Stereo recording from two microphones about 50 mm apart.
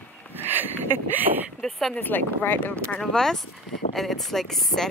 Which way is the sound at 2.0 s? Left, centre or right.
Left.